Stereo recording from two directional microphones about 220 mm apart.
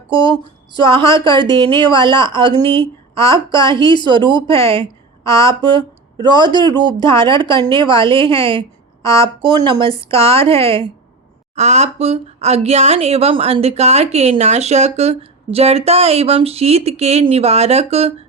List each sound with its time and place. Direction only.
0.1 s speech: 20° right (ahead or behind)
5.2 s speech: 15° left (ahead or behind)
5.5 s speech: 20° right (ahead or behind)
8.3 s a sound: 25° right (ahead or behind)
9.0 s speech: 15° left (ahead or behind)
9.4 s speech: 20° right (ahead or behind)